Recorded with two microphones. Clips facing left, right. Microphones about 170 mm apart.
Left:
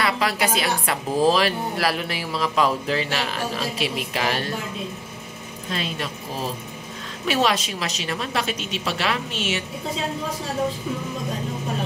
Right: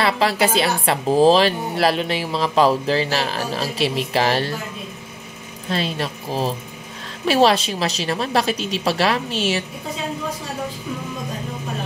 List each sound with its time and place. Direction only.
0.0 s a woman's voice: 30° right (ahead or behind)
5.7 s a woman's voice: 35° right (ahead or behind)
7.2 s a woman's voice: 35° right (ahead or behind)